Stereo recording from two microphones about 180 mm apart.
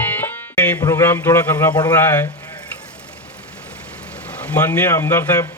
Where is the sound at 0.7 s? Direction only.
15° left (ahead or behind).